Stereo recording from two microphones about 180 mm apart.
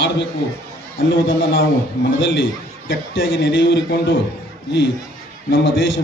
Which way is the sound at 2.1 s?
90° left.